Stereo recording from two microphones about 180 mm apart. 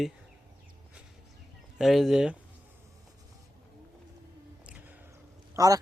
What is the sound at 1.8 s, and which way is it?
Speech, centre (ahead or behind).